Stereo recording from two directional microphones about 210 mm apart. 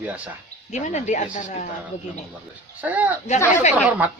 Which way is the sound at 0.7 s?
35° left (ahead or behind).